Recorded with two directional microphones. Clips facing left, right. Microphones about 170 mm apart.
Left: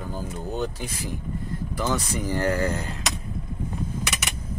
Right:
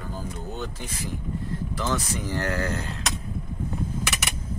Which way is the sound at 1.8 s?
10° left (ahead or behind).